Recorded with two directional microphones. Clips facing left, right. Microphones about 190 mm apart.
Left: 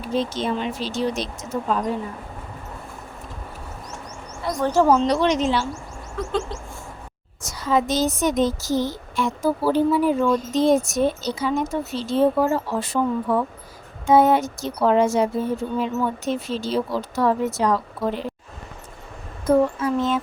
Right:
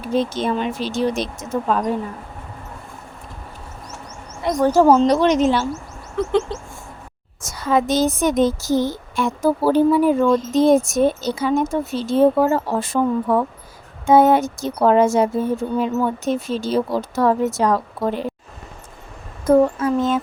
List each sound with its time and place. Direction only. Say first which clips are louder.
0.2 s speech: right 3 dB; 50° right (ahead or behind)
4.6 s speech: right 4 dB; 35° right (ahead or behind)
6.1 s bird: right 6 dB; 20° right (ahead or behind)
7.4 s speech: right 2 dB; 55° right (ahead or behind)
19.5 s speech: right 4 dB; 45° right (ahead or behind)